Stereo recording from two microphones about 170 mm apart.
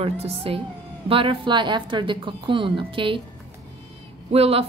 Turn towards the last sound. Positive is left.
turn(degrees=-35)  # may be behind; listen again after turning